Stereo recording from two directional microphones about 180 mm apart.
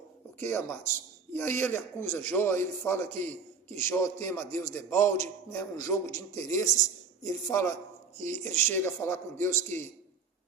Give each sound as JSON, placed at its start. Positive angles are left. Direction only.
{"t": 0.3, "sound": "a man's voice", "side_deg": 10}